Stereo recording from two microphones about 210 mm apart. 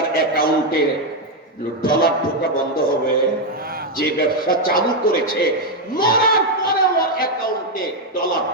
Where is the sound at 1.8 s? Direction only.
45° left (ahead or behind).